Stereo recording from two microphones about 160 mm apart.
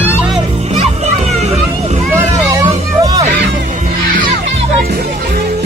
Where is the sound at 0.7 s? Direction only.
40° right (ahead or behind).